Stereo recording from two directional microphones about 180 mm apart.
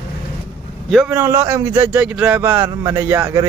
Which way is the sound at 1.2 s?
15° right (ahead or behind).